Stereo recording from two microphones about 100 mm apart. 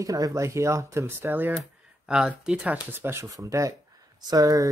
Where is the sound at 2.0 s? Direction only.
5° right (ahead or behind).